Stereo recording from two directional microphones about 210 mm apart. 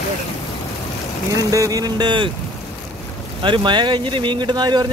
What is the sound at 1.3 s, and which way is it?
Speech, 15° right (ahead or behind).